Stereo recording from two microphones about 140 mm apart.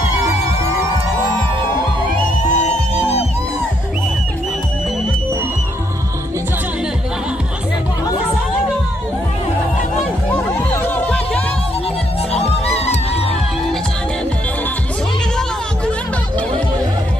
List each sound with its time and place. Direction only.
2.4 s music: 55° left (ahead or behind)
10.8 s music: 15° left (ahead or behind)
12.3 s music: 45° left (ahead or behind)